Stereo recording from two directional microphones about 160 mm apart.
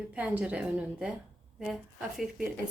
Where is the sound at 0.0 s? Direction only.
10° right (ahead or behind).